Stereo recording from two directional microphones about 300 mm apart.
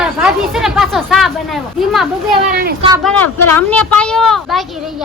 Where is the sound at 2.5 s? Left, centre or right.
Right.